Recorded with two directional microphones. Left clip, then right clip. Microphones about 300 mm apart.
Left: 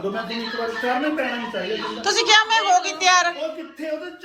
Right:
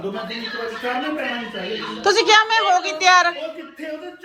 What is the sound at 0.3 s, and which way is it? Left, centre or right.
Speech, left.